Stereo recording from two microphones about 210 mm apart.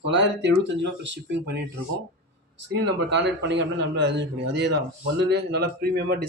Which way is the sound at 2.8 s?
55° right (ahead or behind).